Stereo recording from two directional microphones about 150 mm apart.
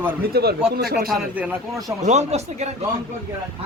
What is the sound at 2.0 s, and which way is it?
Speech, 50° right (ahead or behind).